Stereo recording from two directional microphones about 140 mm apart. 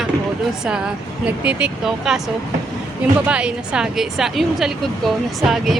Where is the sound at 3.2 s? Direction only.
10° right (ahead or behind).